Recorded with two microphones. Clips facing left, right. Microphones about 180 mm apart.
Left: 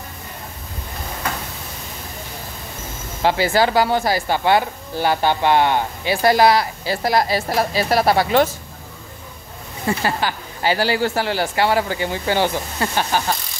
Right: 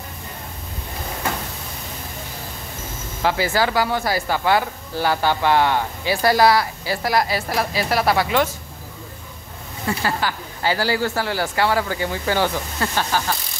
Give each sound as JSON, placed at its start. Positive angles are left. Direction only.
{"t": 3.2, "sound": "speech", "side_deg": 25}
{"t": 9.8, "sound": "speech", "side_deg": 20}